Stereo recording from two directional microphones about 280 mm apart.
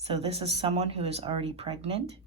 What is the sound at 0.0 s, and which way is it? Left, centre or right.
Speech, right.